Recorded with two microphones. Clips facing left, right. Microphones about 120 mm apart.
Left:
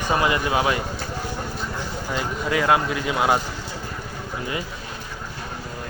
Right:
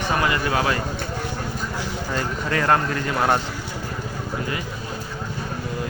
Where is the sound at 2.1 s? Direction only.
10° left (ahead or behind).